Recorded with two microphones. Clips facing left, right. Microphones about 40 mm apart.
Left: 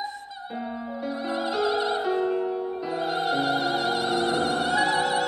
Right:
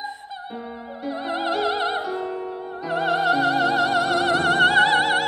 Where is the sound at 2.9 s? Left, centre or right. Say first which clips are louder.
Right 7 dB; right.